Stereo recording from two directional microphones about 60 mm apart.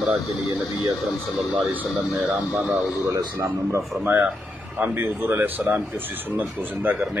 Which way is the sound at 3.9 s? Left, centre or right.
Right.